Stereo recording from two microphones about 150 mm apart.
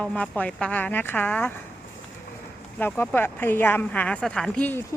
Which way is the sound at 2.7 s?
10° left (ahead or behind).